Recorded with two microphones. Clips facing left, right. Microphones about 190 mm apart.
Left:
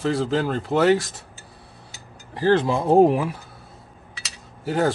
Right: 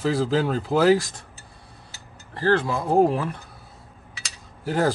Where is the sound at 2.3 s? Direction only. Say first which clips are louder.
Left 3 dB; 20° left (ahead or behind).